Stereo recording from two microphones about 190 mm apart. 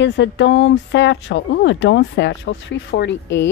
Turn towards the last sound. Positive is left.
turn(degrees=70)  # may be behind; listen again after turning